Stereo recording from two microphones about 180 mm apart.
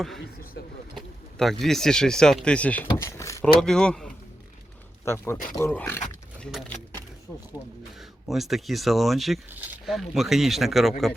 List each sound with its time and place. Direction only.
0.0 s speech: centre (ahead or behind)
0.6 s speech: 75° left (ahead or behind)
0.9 s speech: centre (ahead or behind); by 3.4 s 15° left (ahead or behind)
3.4 s speech: 5° left (ahead or behind)
6.4 s speech: centre (ahead or behind)
7.9 s speech: centre (ahead or behind)